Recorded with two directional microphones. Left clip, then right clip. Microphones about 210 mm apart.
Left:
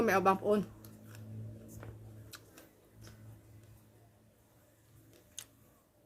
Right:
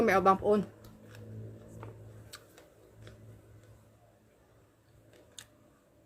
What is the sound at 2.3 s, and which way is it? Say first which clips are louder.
Tick-tock: right 2 dB; centre (ahead or behind).